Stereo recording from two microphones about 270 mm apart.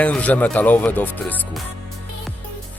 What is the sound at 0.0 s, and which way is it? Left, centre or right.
Speech, centre.